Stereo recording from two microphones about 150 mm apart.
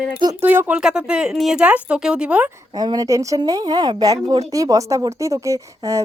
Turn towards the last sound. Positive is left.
turn(degrees=-20)  # may be behind; listen again after turning